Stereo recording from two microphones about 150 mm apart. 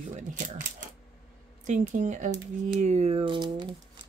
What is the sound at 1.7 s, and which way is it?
A woman's voice, 55° right (ahead or behind).